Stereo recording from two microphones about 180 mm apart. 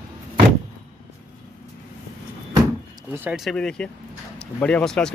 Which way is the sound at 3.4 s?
5° left (ahead or behind).